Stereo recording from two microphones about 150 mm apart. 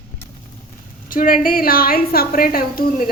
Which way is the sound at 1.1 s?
70° left (ahead or behind).